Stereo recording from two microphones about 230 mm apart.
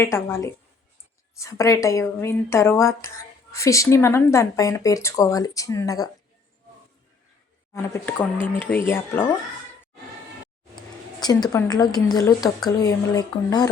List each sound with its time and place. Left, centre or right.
0.0 s speech: centre
7.7 s speech: centre
11.2 s speech: centre